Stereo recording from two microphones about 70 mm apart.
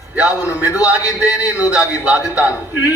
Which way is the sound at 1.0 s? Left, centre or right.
Left.